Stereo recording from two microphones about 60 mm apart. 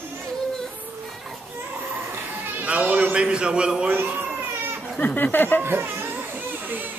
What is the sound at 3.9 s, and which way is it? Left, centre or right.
Speech, right.